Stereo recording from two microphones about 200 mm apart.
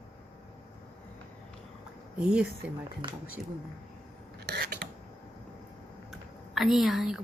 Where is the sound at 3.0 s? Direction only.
25° right (ahead or behind).